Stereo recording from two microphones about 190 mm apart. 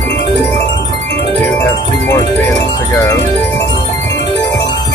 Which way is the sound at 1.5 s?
15° left (ahead or behind).